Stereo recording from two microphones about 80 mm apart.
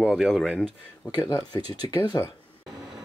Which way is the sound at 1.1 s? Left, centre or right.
Left.